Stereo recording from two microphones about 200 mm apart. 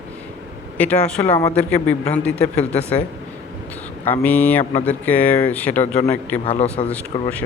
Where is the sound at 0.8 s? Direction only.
5° left (ahead or behind).